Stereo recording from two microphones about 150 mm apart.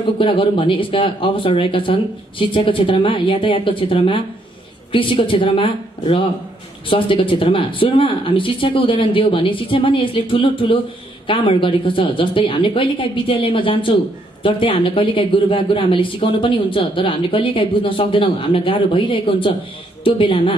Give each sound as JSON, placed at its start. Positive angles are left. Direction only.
{"t": 0.2, "sound": "speech", "side_deg": 35}